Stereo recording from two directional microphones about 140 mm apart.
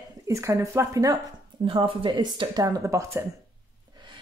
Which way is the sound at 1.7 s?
40° right (ahead or behind).